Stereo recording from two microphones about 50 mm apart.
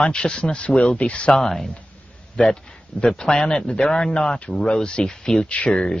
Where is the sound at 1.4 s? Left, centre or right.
Centre.